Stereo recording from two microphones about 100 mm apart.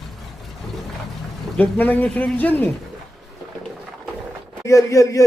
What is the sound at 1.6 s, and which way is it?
Speech, 15° left (ahead or behind).